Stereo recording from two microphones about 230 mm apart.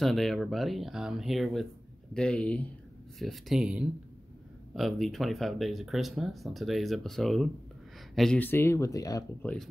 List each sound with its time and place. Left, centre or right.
0.0 s speech: centre